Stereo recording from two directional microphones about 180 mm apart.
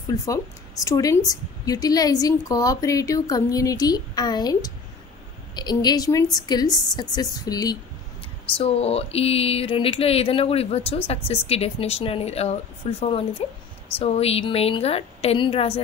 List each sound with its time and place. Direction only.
0.1 s a woman's voice: 20° left (ahead or behind)
8.5 s speech: 35° left (ahead or behind)